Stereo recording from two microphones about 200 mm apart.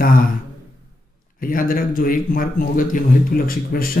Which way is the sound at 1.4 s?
45° left (ahead or behind).